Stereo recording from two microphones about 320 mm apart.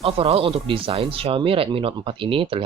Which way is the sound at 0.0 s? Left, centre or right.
Centre.